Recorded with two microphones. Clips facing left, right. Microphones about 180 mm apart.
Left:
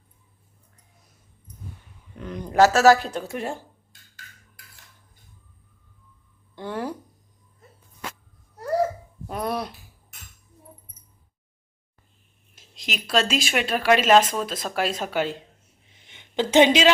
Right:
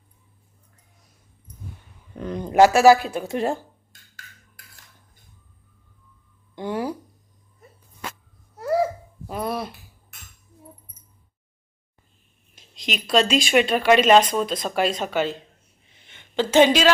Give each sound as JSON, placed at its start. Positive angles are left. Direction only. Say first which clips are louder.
{"t": 2.1, "sound": "speech", "louder": "right 5 dB", "side_deg": -35}
{"t": 2.4, "sound": "speech", "louder": "right 2 dB", "side_deg": -20}
{"t": 3.2, "sound": "speech", "louder": "right 6 dB", "side_deg": -30}
{"t": 6.6, "sound": "a sound", "louder": "right 3 dB", "side_deg": -10}
{"t": 9.2, "sound": "hiccup", "louder": "even", "side_deg": 0}
{"t": 12.5, "sound": "speech", "louder": "right 4 dB", "side_deg": 5}
{"t": 16.0, "sound": "a sound", "louder": "right 1 dB", "side_deg": 15}